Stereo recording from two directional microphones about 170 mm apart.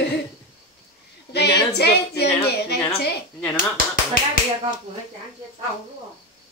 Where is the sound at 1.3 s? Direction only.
75° left (ahead or behind).